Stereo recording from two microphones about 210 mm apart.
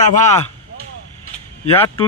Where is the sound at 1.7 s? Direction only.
10° left (ahead or behind).